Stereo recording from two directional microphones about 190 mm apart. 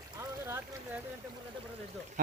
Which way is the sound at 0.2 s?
15° right (ahead or behind).